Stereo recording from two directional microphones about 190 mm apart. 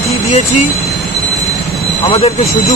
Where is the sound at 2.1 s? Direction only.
30° left (ahead or behind).